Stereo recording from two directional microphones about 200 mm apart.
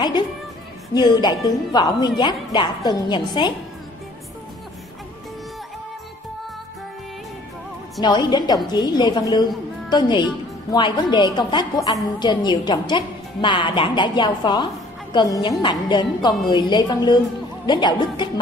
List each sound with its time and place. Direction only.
0.9 s a woman's voice: 20° left (ahead or behind)
8.0 s a woman's voice: 20° left (ahead or behind)